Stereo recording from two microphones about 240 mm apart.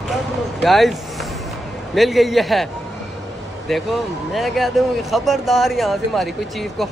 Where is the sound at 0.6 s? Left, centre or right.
Centre.